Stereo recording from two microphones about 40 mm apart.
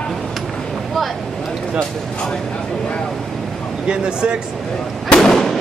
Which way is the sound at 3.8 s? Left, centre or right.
Right.